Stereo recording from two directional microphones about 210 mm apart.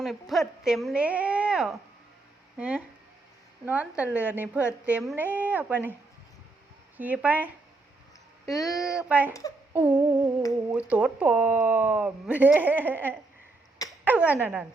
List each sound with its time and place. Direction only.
0.0 s speech: centre (ahead or behind)
6.9 s speech: 10° right (ahead or behind)
10.0 s humming: 20° right (ahead or behind)
10.8 s speech: 5° right (ahead or behind)